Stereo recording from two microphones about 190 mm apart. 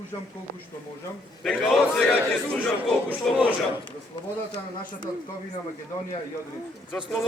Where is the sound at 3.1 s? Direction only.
10° right (ahead or behind).